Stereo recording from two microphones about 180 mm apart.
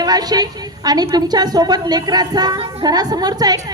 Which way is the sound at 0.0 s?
20° right (ahead or behind).